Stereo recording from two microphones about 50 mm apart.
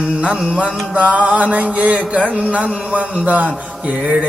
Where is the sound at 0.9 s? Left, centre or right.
Right.